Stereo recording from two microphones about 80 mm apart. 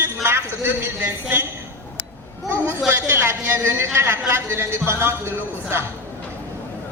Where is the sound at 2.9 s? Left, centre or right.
Right.